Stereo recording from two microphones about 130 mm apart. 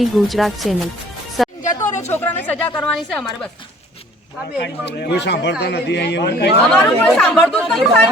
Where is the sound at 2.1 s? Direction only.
15° left (ahead or behind).